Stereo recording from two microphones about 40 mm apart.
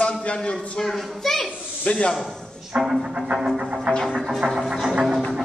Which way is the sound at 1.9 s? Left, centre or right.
Left.